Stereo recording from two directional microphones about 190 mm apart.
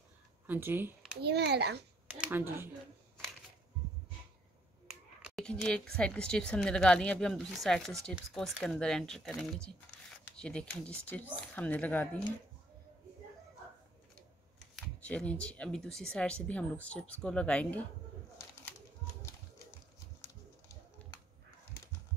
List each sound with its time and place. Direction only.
0.5 s speech: 10° right (ahead or behind)
1.2 s a child's voice: 60° right (ahead or behind)
2.0 s speech: 5° right (ahead or behind)
4.8 s a sound: centre (ahead or behind)
5.9 s speech: 5° left (ahead or behind)
15.0 s speech: 5° left (ahead or behind)
20.2 s a sound: 10° left (ahead or behind)